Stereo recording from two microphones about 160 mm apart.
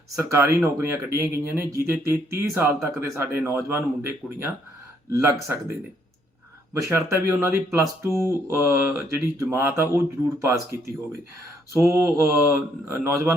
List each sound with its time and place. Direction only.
0.2 s speech: 15° right (ahead or behind)
6.7 s speech: 15° right (ahead or behind)